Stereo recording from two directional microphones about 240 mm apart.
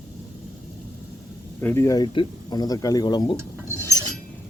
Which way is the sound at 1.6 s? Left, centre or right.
Centre.